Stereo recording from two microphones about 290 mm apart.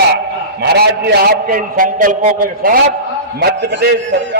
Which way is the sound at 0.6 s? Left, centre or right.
Right.